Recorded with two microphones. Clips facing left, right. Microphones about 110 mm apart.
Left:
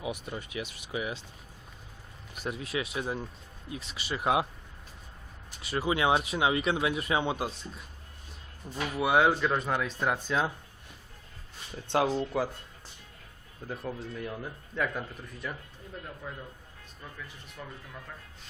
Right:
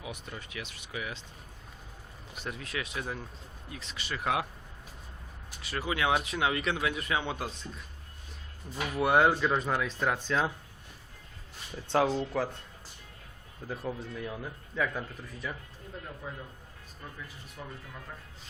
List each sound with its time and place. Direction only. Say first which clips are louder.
0.0 s speech: left 6 dB; 15° left (ahead or behind)
2.3 s speech: left 4 dB; 15° left (ahead or behind)
5.7 s speech: left 3 dB; 20° left (ahead or behind)
8.7 s speech: even; 5° left (ahead or behind)
10.0 s speech: even; 10° left (ahead or behind)
11.9 s speech: even; centre (ahead or behind)
13.7 s speech: even; centre (ahead or behind)
16.2 s a man's voice: even; 15° right (ahead or behind)
17.6 s a man's voice: even; 15° right (ahead or behind)